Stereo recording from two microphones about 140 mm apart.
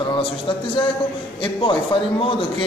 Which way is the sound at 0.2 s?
35° left (ahead or behind).